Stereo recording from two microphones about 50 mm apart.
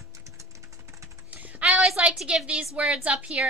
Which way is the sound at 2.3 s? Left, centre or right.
Right.